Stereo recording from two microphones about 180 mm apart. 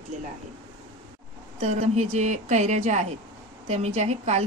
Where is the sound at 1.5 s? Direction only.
35° right (ahead or behind).